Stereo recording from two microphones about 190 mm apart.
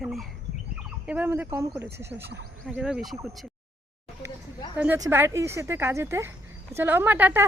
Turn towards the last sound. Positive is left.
turn(degrees=-10)  # may be behind; listen again after turning